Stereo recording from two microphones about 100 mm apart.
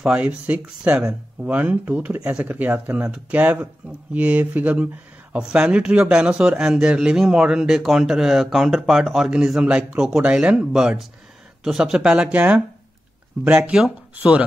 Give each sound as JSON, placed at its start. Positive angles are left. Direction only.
{"t": 0.0, "sound": "a man's voice", "side_deg": -15}
{"t": 13.7, "sound": "a man's voice", "side_deg": -10}